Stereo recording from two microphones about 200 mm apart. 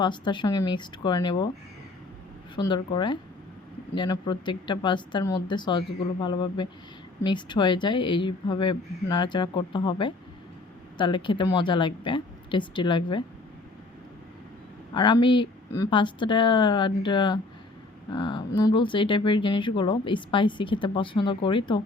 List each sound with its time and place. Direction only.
0.0 s speech: 25° left (ahead or behind)
2.6 s speech: 20° left (ahead or behind)
14.9 s speech: 25° left (ahead or behind)